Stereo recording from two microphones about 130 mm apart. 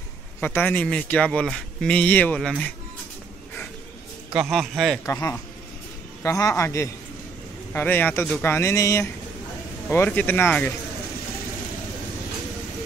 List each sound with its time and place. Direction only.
0.4 s a man's voice: 15° left (ahead or behind)
4.3 s a man's voice: 5° right (ahead or behind)
5.0 s a man's voice: 20° left (ahead or behind)